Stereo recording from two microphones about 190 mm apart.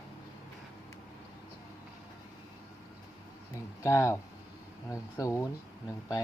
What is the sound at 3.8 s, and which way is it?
Speech, 15° left (ahead or behind).